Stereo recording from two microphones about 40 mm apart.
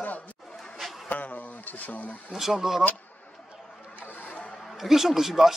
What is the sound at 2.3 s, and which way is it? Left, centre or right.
Speech, centre.